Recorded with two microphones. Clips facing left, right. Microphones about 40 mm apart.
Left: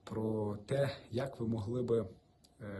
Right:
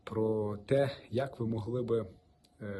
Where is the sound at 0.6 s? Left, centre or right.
Right.